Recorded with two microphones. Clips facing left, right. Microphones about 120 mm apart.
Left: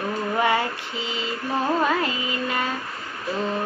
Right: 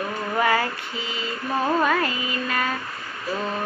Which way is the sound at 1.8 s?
25° left (ahead or behind).